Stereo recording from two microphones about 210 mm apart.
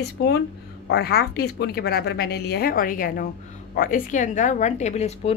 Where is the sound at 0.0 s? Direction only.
50° left (ahead or behind).